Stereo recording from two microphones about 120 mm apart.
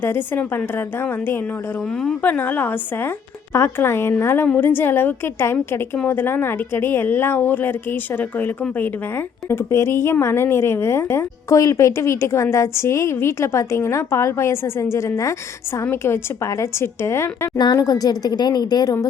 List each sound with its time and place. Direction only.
0.0 s a woman's voice: 15° left (ahead or behind)
17.6 s speech: 35° left (ahead or behind)